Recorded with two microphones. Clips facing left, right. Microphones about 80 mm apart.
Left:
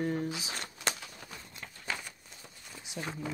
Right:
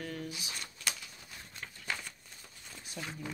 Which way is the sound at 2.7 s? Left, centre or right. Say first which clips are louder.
Left 1 dB; centre.